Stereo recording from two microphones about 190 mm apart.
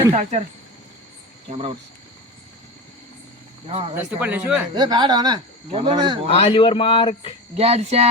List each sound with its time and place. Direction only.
0.1 s speech: 35° right (ahead or behind)
3.7 s speech: 30° right (ahead or behind)
3.9 s speech: 10° right (ahead or behind)
4.7 s speech: 20° right (ahead or behind)
6.3 s speech: 30° left (ahead or behind)
7.5 s speech: 30° right (ahead or behind)